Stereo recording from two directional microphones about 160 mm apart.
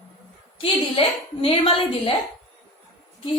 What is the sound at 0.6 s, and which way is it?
A woman's voice, 35° left (ahead or behind).